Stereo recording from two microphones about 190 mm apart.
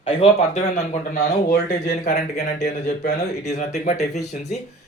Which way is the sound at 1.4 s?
45° left (ahead or behind).